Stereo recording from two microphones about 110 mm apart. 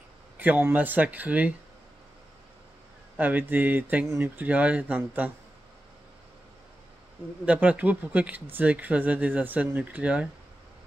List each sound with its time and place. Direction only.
0.4 s speech: 20° right (ahead or behind)
3.2 s speech: 15° right (ahead or behind)
7.4 s speech: 15° right (ahead or behind)